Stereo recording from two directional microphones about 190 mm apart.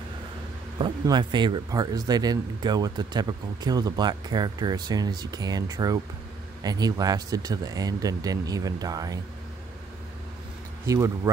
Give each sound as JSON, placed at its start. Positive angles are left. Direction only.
{"t": 0.7, "sound": "speech", "side_deg": -25}